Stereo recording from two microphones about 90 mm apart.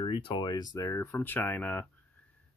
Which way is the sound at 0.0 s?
65° left (ahead or behind).